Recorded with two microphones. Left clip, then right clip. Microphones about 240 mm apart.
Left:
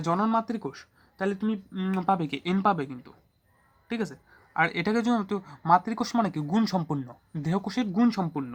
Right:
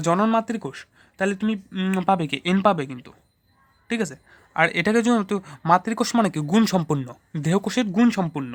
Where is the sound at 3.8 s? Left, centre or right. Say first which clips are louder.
Right 6 dB; right.